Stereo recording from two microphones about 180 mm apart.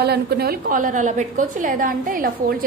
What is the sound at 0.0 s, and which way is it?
A woman's voice, 60° right (ahead or behind).